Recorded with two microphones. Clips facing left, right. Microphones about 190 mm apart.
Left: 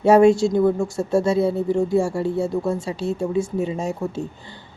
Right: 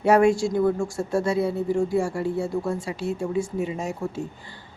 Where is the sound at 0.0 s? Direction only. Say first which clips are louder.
Left 5 dB; 25° left (ahead or behind).